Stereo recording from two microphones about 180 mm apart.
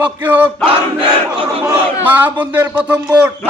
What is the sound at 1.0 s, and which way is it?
Battle cry, 30° right (ahead or behind).